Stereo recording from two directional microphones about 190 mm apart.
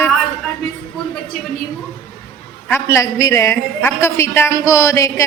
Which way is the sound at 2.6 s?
15° left (ahead or behind).